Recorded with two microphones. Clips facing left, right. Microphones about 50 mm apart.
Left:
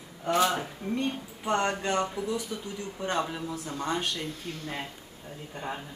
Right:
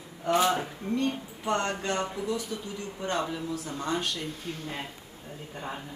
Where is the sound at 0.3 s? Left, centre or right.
Centre.